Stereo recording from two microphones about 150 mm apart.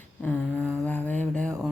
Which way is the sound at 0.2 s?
10° left (ahead or behind).